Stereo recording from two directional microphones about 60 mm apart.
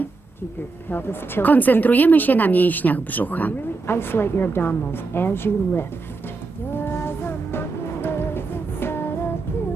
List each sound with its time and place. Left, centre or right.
0.9 s speech: left
3.9 s a woman's voice: left
6.7 s music: left